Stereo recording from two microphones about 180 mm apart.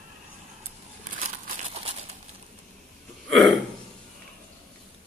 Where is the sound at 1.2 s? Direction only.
35° right (ahead or behind).